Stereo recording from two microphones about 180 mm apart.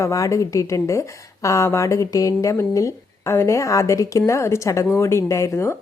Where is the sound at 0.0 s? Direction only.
20° left (ahead or behind).